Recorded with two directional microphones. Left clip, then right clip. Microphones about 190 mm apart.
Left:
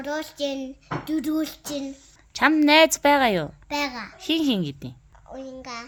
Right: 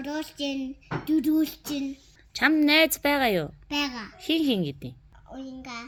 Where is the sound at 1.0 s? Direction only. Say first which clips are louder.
Right 3 dB; 55° left (ahead or behind); by 4.9 s 35° left (ahead or behind).